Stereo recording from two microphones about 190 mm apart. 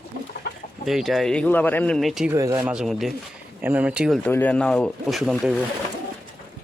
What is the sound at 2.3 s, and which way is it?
Speech, 15° right (ahead or behind).